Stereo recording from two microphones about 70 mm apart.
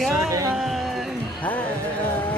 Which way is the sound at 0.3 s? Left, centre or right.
Right.